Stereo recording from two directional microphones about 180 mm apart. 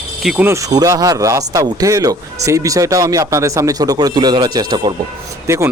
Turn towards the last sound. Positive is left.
turn(degrees=-15)  # may be behind; listen again after turning